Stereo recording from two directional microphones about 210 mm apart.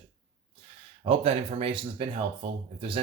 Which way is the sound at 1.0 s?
30° right (ahead or behind).